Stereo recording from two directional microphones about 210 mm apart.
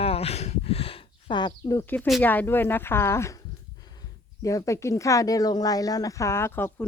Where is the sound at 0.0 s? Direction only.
30° left (ahead or behind).